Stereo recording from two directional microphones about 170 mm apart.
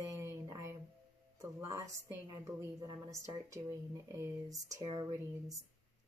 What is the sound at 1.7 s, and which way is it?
Speech, 20° right (ahead or behind).